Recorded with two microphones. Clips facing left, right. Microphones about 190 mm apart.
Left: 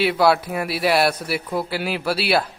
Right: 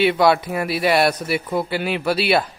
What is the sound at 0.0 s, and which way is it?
A man's voice, centre (ahead or behind).